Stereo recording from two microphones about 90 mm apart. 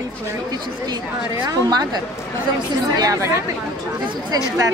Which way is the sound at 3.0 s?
35° right (ahead or behind).